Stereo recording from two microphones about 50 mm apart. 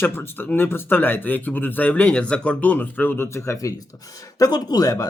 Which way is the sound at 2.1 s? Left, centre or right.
Left.